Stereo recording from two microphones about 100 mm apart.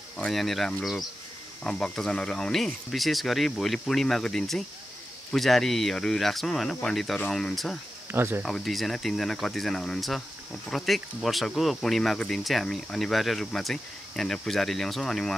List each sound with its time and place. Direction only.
0.3 s speech: centre (ahead or behind)
8.1 s speech: 25° right (ahead or behind)
8.4 s speech: centre (ahead or behind)